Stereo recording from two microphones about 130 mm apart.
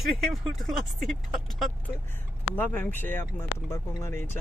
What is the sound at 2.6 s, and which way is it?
Speech, 15° left (ahead or behind).